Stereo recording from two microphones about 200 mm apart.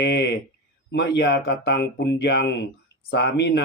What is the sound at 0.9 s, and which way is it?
Speech, 60° left (ahead or behind).